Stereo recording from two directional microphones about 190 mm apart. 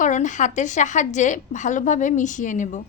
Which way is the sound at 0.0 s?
40° left (ahead or behind).